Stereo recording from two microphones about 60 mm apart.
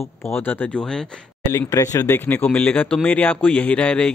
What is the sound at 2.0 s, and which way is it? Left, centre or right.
Speech, left.